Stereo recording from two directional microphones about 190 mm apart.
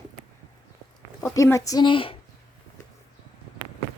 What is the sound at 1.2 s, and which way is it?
Speech, 15° left (ahead or behind).